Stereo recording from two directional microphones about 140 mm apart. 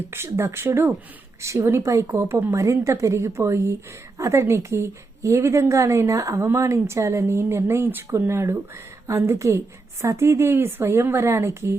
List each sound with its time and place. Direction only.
0.1 s a woman's voice: 20° right (ahead or behind)